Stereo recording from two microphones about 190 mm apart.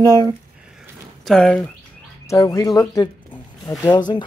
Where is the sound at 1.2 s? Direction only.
5° left (ahead or behind).